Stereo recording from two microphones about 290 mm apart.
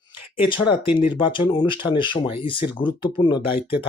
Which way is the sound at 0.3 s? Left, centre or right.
Centre.